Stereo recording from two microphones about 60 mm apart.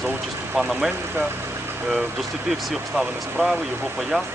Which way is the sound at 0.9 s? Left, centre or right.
Right.